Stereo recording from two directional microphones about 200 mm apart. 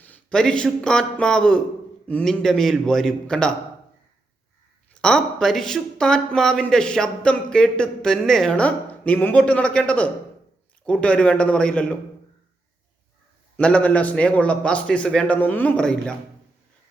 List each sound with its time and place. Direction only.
0.0 s speech: 5° left (ahead or behind)
4.9 s speech: 5° left (ahead or behind)
13.6 s speech: 5° left (ahead or behind)